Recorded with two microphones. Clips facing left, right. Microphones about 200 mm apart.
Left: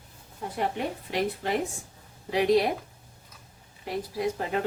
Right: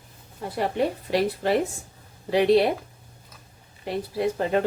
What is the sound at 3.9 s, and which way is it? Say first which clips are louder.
Speech: right 4 dB; 30° right (ahead or behind).